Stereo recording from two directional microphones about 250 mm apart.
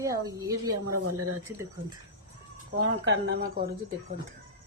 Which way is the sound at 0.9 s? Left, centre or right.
Right.